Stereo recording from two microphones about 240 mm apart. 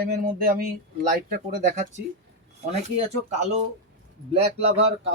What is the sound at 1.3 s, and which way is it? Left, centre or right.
Speech, right.